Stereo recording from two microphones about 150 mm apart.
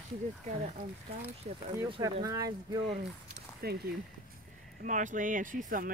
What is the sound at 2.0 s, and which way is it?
Speech, 25° right (ahead or behind).